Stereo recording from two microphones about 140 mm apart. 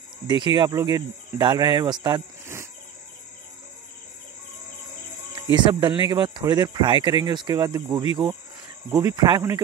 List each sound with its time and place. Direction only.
0.3 s speech: 35° right (ahead or behind)
2.4 s cricket: 20° right (ahead or behind)
5.3 s speech: 35° right (ahead or behind)